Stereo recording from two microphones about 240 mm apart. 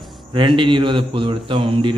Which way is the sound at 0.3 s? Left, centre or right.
Right.